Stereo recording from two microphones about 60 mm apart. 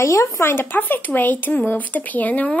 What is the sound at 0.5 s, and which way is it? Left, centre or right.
Speech, left.